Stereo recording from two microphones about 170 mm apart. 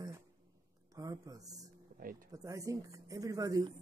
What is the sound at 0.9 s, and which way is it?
Speech, 20° right (ahead or behind).